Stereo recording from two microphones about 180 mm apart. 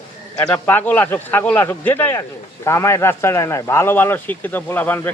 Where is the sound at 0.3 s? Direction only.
10° left (ahead or behind).